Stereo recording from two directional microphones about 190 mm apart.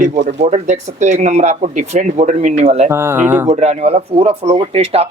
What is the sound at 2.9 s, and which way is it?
Speech, 15° right (ahead or behind).